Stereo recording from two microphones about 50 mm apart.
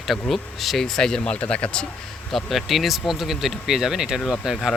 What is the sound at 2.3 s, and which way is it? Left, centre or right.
Speech, centre.